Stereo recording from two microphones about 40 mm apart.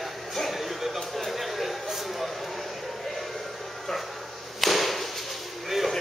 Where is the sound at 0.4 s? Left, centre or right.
Centre.